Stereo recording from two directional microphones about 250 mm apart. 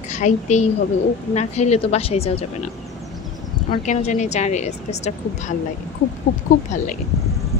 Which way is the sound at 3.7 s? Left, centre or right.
Left.